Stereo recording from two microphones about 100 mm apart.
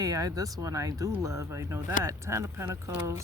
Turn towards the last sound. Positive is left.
turn(degrees=-30)  # may be behind; listen again after turning